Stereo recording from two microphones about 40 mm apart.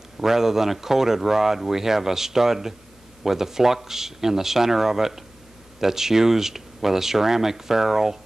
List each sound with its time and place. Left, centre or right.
0.2 s speech: centre